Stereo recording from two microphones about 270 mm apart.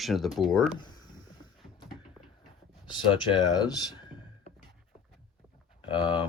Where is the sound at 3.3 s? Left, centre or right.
Centre.